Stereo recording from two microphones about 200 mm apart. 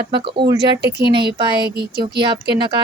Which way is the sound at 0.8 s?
55° right (ahead or behind).